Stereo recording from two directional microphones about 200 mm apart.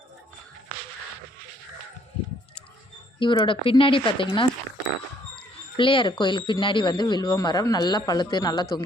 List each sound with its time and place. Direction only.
3.2 s speech: 25° left (ahead or behind)
5.7 s speech: 25° left (ahead or behind)